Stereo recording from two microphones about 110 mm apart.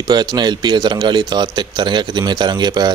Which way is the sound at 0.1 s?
40° right (ahead or behind).